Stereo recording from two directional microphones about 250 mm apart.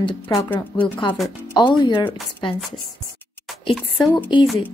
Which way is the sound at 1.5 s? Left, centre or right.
Centre.